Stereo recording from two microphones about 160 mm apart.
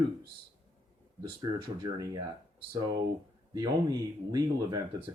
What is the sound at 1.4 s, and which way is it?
Speech, 25° right (ahead or behind).